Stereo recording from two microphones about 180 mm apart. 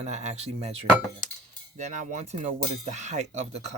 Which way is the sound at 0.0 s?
40° right (ahead or behind).